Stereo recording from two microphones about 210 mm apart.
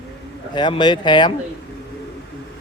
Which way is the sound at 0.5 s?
20° left (ahead or behind).